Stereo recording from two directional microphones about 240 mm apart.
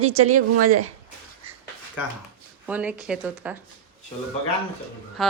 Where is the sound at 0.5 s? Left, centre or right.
Right.